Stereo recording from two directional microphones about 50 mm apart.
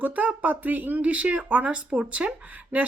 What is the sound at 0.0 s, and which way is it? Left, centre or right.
Speech, right.